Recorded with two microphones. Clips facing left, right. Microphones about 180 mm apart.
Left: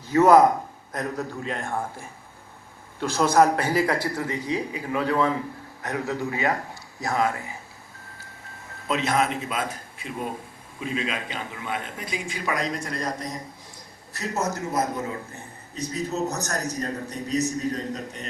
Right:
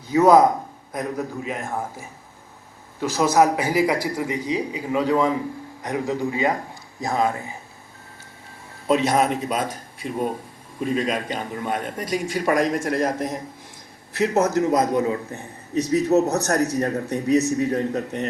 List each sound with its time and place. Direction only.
0.1 s a man's voice: 15° right (ahead or behind)
8.9 s a man's voice: 45° right (ahead or behind)
14.3 s a man's voice: 70° right (ahead or behind)